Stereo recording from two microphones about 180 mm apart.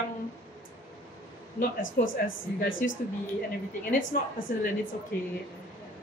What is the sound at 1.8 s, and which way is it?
Speech, 90° left.